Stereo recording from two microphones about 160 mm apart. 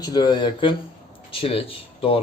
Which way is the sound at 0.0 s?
25° left (ahead or behind).